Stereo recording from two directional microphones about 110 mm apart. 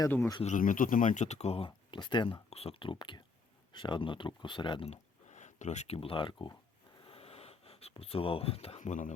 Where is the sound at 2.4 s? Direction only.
65° left (ahead or behind); by 4.8 s 45° left (ahead or behind).